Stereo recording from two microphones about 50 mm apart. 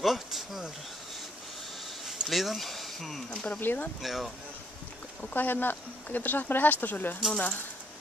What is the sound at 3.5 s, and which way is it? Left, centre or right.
Speech, left.